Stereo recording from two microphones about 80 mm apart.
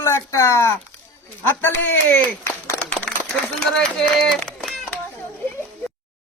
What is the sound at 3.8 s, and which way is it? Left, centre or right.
Speech, centre.